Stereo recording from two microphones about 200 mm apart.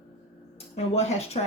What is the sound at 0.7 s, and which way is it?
Speech, 30° left (ahead or behind).